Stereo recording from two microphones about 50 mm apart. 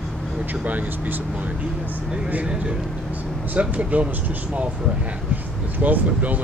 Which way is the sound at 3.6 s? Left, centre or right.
Right.